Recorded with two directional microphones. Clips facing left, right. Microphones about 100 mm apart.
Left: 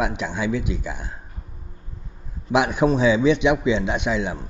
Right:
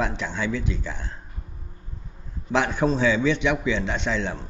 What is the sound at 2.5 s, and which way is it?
A man's voice, 15° left (ahead or behind).